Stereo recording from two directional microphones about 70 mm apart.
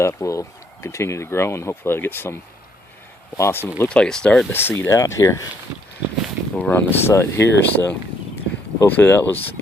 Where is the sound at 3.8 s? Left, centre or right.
Centre.